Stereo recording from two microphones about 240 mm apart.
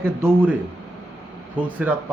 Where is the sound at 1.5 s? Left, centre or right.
Centre.